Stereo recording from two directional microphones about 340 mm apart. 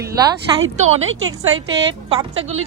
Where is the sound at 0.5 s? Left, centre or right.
Centre.